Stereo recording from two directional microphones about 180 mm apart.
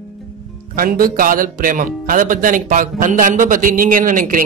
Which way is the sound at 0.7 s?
50° right (ahead or behind).